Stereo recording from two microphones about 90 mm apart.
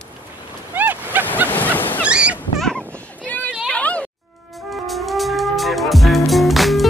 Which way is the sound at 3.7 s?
15° left (ahead or behind).